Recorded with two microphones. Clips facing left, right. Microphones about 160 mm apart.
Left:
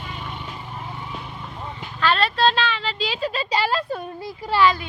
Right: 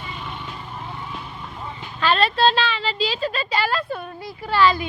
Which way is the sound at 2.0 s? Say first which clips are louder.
Right 1 dB; 10° right (ahead or behind).